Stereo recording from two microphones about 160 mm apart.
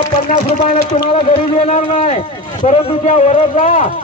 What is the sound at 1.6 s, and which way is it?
A man's voice, 50° left (ahead or behind).